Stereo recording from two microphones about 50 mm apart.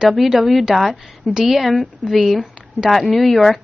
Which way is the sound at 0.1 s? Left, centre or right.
Centre.